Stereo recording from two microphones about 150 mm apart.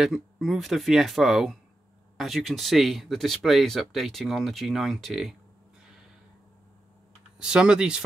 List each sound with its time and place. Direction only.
0.0 s speech: centre (ahead or behind)
7.3 s speech: 5° right (ahead or behind)